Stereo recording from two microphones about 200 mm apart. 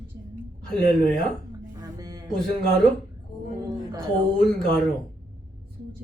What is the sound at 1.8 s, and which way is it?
Music, 20° right (ahead or behind).